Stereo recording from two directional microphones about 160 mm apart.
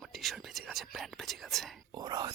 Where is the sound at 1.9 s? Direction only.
25° right (ahead or behind).